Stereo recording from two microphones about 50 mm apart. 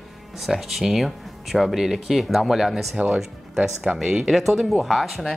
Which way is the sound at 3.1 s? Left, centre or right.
Centre.